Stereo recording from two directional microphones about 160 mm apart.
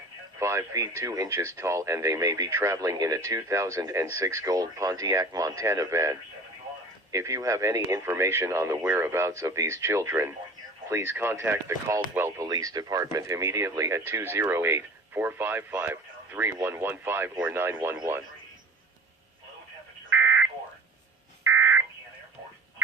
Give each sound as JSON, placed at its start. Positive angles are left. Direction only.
{"t": 0.3, "sound": "speech", "side_deg": -20}
{"t": 20.1, "sound": "fire alarm", "side_deg": -15}
{"t": 21.4, "sound": "fire alarm", "side_deg": -15}